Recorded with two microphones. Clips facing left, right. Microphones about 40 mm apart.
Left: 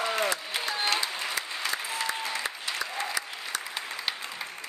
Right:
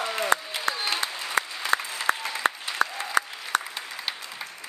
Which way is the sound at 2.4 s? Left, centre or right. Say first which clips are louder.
Right 7 dB; right.